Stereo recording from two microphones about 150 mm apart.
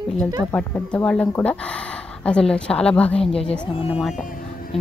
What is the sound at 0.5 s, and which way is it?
Speech, 10° left (ahead or behind).